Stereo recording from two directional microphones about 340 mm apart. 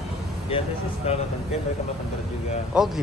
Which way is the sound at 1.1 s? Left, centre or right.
Centre.